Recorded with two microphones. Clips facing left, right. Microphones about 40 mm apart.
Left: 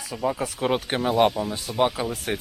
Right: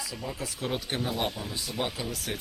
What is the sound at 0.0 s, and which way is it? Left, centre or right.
Speech, left.